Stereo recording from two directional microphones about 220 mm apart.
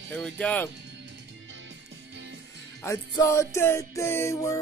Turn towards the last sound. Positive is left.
turn(degrees=15)  # may be behind; listen again after turning